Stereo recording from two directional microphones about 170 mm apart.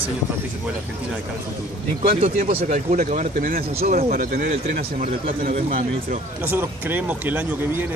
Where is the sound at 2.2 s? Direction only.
35° right (ahead or behind).